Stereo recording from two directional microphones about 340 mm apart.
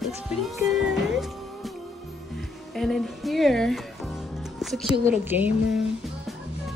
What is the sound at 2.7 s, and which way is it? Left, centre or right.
Speech, centre.